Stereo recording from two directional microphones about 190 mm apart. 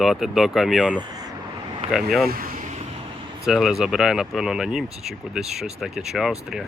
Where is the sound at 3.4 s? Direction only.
Centre (ahead or behind).